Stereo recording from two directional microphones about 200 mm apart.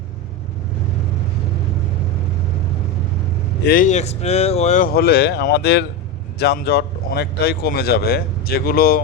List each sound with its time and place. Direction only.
3.6 s speech: 45° left (ahead or behind)
4.9 s speech: 50° left (ahead or behind)